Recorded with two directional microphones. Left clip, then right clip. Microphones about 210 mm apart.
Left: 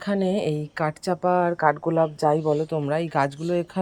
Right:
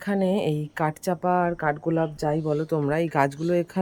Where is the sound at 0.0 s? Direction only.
15° right (ahead or behind).